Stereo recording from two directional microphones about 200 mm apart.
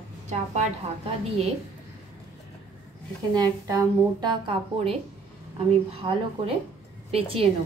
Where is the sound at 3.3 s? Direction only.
20° right (ahead or behind).